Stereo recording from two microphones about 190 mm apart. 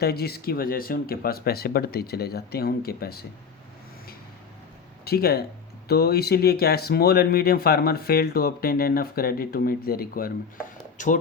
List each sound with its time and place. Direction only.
0.0 s speech: 55° left (ahead or behind)
5.0 s speech: 55° left (ahead or behind)